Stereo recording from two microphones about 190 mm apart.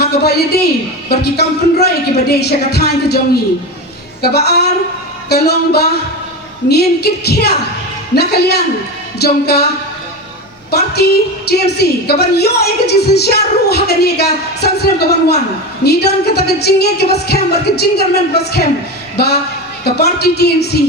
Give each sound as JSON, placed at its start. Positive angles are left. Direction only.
{"t": 0.0, "sound": "a woman's voice", "side_deg": 55}
{"t": 4.2, "sound": "a woman's voice", "side_deg": 60}
{"t": 10.7, "sound": "a woman's voice", "side_deg": 60}